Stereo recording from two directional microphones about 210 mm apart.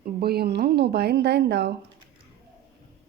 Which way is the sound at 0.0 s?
45° right (ahead or behind).